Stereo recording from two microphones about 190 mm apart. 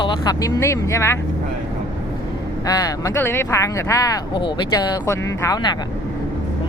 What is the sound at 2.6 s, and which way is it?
Speech, 20° left (ahead or behind).